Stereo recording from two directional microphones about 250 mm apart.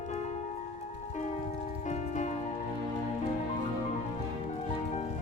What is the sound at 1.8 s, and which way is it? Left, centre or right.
Music, left.